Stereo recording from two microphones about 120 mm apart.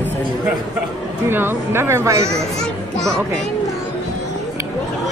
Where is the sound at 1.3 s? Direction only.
20° right (ahead or behind).